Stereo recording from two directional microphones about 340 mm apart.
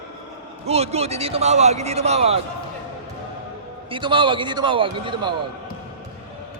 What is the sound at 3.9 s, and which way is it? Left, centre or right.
Speech, centre.